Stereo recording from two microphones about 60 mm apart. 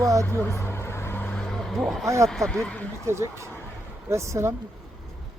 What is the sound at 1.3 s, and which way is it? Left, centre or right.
Vehicle, centre.